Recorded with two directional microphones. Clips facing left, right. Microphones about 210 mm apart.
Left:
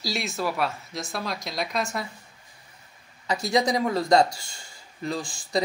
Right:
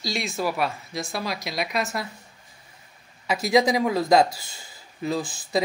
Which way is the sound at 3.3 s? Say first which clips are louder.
Right 4 dB; 90° right.